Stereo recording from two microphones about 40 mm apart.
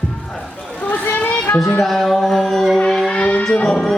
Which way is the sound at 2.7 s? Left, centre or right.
Centre.